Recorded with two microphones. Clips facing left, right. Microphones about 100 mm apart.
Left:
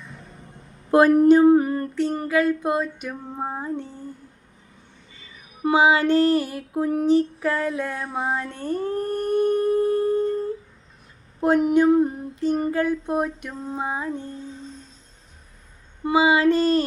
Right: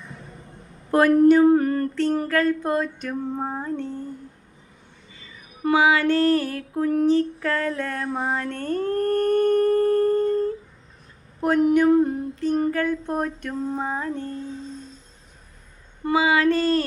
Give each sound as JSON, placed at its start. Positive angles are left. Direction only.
{"t": 0.9, "sound": "female singing", "side_deg": 20}
{"t": 5.6, "sound": "female singing", "side_deg": 25}
{"t": 9.0, "sound": "a sound", "side_deg": -80}
{"t": 9.3, "sound": "humming", "side_deg": 10}
{"t": 11.3, "sound": "speech", "side_deg": 20}
{"t": 12.5, "sound": "female singing", "side_deg": 15}
{"t": 16.0, "sound": "speech", "side_deg": 20}